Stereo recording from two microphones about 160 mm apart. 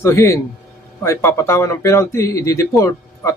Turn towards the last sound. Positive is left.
turn(degrees=20)  # may be behind; listen again after turning